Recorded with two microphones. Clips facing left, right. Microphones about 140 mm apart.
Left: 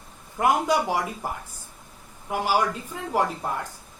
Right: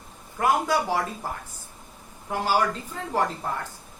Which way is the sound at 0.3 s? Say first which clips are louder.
Left 1 dB; 20° left (ahead or behind).